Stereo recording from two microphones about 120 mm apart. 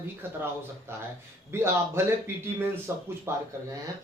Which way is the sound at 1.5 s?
20° right (ahead or behind).